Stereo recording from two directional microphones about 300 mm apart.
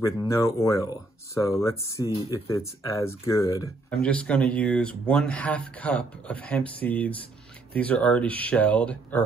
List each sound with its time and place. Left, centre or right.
0.0 s speech: centre